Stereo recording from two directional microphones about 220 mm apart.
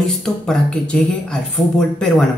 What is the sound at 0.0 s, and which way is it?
Speech, 5° left (ahead or behind).